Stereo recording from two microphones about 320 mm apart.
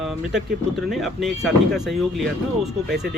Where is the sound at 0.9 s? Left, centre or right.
Centre.